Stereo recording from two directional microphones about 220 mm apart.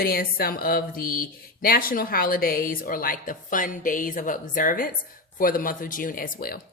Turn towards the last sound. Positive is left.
turn(degrees=40)  # may be behind; listen again after turning